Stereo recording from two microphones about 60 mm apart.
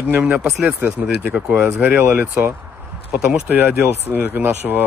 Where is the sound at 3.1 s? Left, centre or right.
Centre.